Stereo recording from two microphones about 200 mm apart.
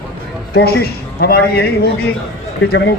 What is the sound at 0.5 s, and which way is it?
Speech, 50° left (ahead or behind).